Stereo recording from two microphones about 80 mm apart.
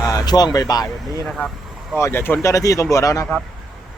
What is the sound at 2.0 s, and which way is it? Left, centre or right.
Speech, left.